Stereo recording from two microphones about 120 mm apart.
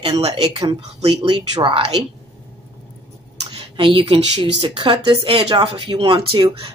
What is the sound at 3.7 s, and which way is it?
Speech, 45° right (ahead or behind).